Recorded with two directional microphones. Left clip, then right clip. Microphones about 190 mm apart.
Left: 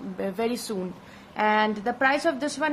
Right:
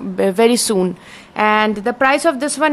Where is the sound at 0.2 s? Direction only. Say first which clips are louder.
Right 15 dB; 50° right (ahead or behind).